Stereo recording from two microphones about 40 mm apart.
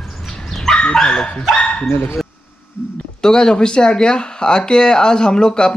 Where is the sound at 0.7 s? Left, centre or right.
Left.